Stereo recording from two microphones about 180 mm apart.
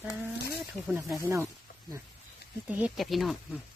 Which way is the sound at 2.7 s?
5° right (ahead or behind).